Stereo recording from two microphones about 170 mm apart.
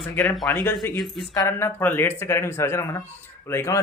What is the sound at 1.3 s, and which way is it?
Speech, 15° left (ahead or behind).